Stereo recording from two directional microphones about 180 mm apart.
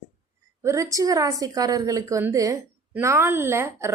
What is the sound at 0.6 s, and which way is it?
A woman's voice, 15° right (ahead or behind).